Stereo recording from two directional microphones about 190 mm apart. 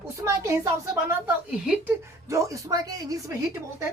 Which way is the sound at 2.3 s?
15° right (ahead or behind).